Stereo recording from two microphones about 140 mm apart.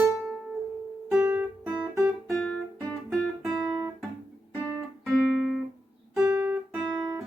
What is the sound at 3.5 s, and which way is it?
Guitar, 30° right (ahead or behind).